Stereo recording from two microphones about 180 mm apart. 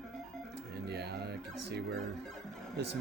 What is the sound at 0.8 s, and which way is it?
Music, 65° right (ahead or behind).